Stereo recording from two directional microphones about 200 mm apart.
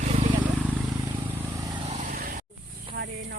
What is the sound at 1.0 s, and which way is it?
Vehicle, 15° right (ahead or behind).